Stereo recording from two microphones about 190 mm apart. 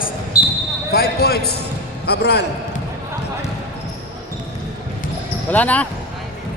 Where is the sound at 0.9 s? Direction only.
55° left (ahead or behind).